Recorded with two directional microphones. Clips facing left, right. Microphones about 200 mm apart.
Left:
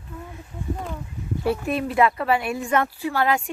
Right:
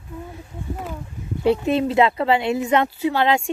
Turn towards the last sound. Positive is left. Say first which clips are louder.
# right 3 dB
turn(degrees=-25)  # may be behind; listen again after turning